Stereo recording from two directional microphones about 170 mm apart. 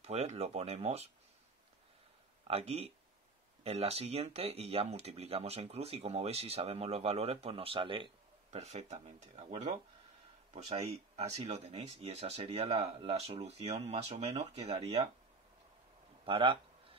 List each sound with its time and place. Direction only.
0.0 s speech: 40° right (ahead or behind)
2.4 s speech: 35° right (ahead or behind)
16.3 s speech: 30° right (ahead or behind)